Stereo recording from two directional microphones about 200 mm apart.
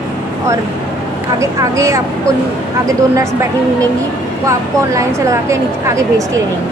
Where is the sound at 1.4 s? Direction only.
15° right (ahead or behind).